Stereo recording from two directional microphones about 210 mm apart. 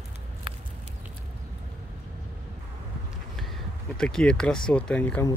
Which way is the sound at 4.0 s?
5° left (ahead or behind).